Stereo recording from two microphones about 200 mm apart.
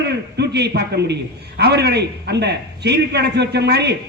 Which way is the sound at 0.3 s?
55° right (ahead or behind).